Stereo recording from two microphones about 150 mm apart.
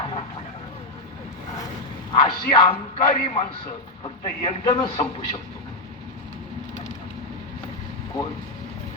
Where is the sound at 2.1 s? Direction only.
35° left (ahead or behind).